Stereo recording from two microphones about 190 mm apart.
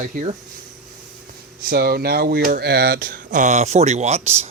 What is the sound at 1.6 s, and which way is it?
Speech, 55° right (ahead or behind).